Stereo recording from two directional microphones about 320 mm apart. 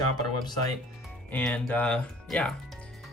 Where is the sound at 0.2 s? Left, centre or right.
Centre.